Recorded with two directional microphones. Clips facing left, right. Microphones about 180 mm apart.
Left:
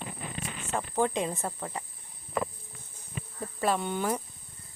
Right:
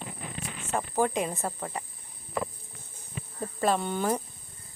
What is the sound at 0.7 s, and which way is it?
Speech, 10° right (ahead or behind).